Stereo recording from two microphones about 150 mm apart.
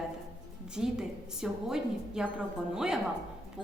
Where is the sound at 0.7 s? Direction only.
5° right (ahead or behind).